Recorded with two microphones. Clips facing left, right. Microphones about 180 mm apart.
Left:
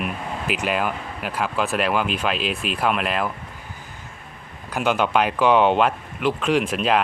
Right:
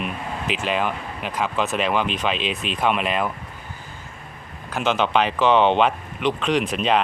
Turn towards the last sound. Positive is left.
turn(degrees=5)  # may be behind; listen again after turning